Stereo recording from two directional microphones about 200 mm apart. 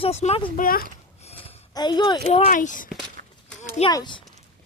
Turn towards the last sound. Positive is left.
turn(degrees=20)  # may be behind; listen again after turning